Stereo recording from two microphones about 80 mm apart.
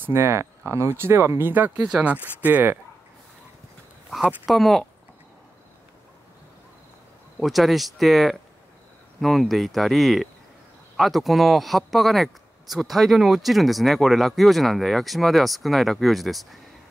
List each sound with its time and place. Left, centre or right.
0.0 s speech: right
1.9 s speech: centre
2.4 s speech: right
4.5 s speech: centre
7.3 s speech: centre